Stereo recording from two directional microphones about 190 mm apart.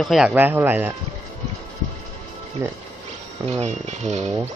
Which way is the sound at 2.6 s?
15° right (ahead or behind).